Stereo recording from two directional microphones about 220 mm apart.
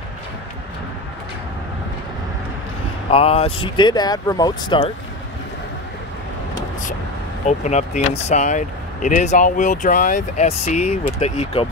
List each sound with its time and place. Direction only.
3.1 s speech: 25° left (ahead or behind)
7.4 s speech: 30° left (ahead or behind)